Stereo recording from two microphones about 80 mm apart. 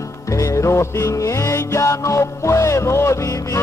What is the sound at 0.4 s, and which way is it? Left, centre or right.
Music, left.